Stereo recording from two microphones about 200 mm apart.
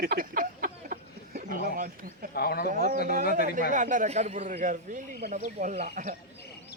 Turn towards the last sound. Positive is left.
turn(degrees=-40)  # may be behind; listen again after turning